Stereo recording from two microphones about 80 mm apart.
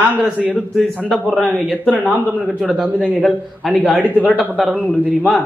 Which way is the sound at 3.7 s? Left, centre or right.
Centre.